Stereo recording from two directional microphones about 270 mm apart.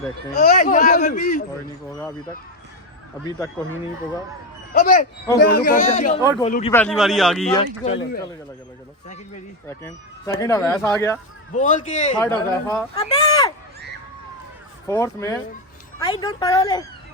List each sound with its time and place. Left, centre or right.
0.3 s speech: left
1.9 s a woman's voice: centre
3.2 s a woman's voice: centre
4.7 s speech: left
5.4 s a man's voice: left
5.7 s speech: left
6.7 s a man's voice: centre
7.5 s speech: centre
9.6 s a woman's voice: centre
11.5 s speech: left
12.5 s a woman's voice: centre
13.0 s speech: left
14.8 s a woman's voice: centre